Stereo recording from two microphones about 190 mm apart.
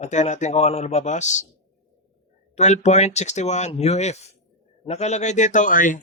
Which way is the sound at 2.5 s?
35° left (ahead or behind).